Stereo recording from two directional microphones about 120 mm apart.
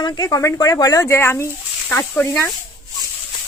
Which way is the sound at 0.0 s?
30° left (ahead or behind).